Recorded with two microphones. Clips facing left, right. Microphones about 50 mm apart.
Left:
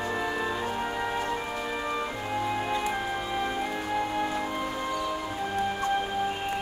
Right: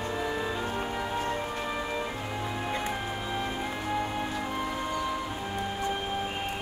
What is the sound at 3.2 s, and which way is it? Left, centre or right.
Music, centre.